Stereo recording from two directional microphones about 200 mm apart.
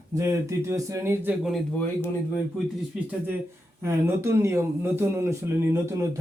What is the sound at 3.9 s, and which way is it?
Speech, 15° right (ahead or behind).